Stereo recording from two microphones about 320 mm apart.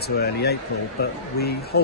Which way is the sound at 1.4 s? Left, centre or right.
Left.